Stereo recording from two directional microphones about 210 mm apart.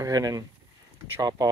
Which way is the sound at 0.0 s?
15° right (ahead or behind).